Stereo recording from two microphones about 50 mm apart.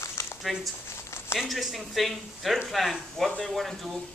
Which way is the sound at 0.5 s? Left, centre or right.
Centre.